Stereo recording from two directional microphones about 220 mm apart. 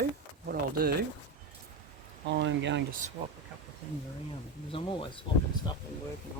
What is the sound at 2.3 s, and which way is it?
Speech, 55° right (ahead or behind).